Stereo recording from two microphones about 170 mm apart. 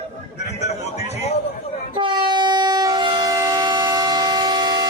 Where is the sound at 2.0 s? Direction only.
25° right (ahead or behind).